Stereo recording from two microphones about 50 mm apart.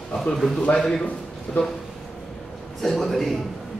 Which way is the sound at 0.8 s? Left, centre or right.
Centre.